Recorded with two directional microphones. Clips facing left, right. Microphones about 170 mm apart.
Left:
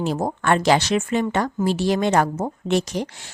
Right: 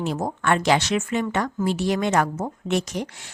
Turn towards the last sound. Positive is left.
turn(degrees=30)  # may be behind; listen again after turning